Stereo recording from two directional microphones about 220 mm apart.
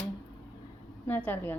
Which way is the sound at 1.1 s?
10° left (ahead or behind).